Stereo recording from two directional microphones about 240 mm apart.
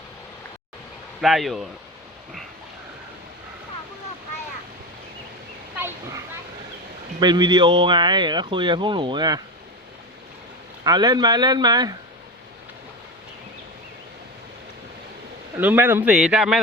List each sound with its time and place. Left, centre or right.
1.2 s speech: centre
5.7 s children playing: centre
7.2 s speech: centre
10.8 s speech: centre
15.5 s speech: centre